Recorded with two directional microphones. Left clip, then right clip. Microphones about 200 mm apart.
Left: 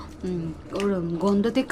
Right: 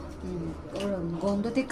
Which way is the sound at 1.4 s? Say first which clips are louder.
Left 6 dB; 45° left (ahead or behind).